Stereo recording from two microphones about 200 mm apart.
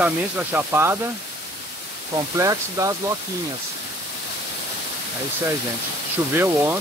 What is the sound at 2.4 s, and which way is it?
Speech, 15° right (ahead or behind).